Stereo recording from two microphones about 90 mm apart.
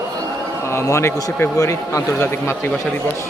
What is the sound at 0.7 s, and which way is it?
A man's voice, 30° left (ahead or behind).